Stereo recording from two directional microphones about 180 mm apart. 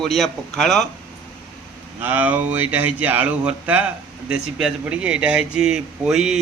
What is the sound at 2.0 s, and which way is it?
Speech, 10° right (ahead or behind).